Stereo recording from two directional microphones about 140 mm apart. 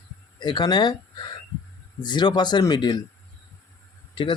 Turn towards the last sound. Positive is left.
turn(degrees=35)  # may be behind; listen again after turning